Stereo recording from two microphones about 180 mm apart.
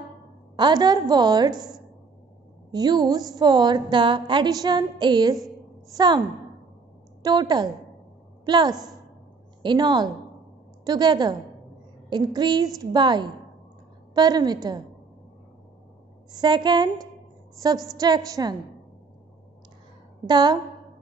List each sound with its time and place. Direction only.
0.6 s a woman's voice: 25° right (ahead or behind)
7.2 s a woman's voice: 25° right (ahead or behind)
16.3 s a woman's voice: 25° right (ahead or behind)
20.2 s a woman's voice: 25° right (ahead or behind)